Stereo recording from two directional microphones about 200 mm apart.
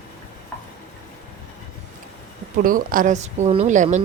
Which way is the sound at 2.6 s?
45° right (ahead or behind).